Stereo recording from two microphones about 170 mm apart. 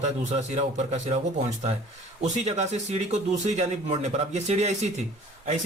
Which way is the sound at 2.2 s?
40° right (ahead or behind).